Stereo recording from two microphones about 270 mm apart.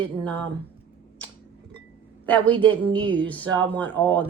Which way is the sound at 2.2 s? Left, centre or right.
Centre.